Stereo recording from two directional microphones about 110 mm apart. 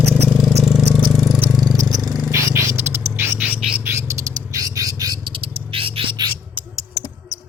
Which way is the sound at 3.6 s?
5° right (ahead or behind).